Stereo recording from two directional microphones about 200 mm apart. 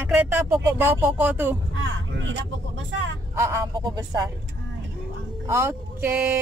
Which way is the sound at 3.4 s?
15° right (ahead or behind).